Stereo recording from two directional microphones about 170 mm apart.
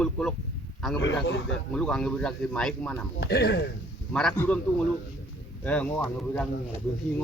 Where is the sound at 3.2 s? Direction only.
65° left (ahead or behind).